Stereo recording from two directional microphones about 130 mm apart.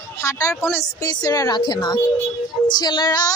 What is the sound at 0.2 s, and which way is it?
A woman's voice, 20° left (ahead or behind).